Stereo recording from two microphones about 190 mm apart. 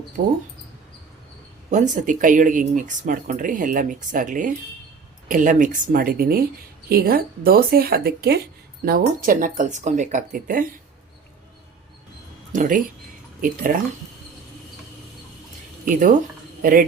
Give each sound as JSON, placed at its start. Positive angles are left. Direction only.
{"t": 0.2, "sound": "speech", "side_deg": -35}
{"t": 1.7, "sound": "speech", "side_deg": -40}
{"t": 12.5, "sound": "speech", "side_deg": -45}
{"t": 15.9, "sound": "speech", "side_deg": -45}